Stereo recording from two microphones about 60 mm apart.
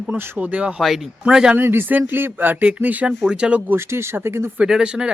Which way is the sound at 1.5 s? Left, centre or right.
Right.